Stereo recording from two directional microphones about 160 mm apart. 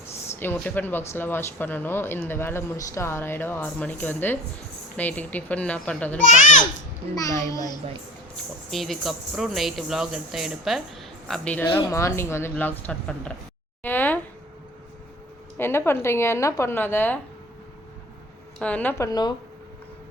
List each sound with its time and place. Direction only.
0.3 s speech: 10° left (ahead or behind)
6.1 s a child's voice: 55° left (ahead or behind)
7.3 s a child's voice: 20° left (ahead or behind)
8.7 s speech: centre (ahead or behind)
11.3 s speech: 10° left (ahead or behind)
13.8 s a sound: 10° left (ahead or behind)
15.5 s speech: 15° left (ahead or behind)
18.6 s speech: 10° left (ahead or behind)